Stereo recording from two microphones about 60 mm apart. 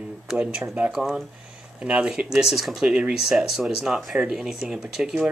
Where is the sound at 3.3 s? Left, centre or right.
Centre.